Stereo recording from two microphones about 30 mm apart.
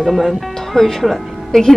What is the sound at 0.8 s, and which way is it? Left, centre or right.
Speech, left.